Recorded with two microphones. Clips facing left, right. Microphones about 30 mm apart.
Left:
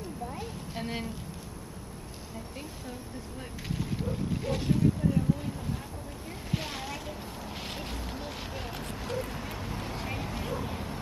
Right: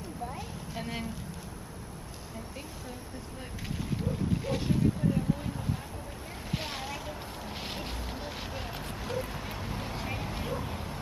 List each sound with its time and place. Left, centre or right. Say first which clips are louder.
0.3 s a sound: left 1 dB; centre
4.1 s speech: right 1 dB; centre
6.5 s speech: left 1 dB; centre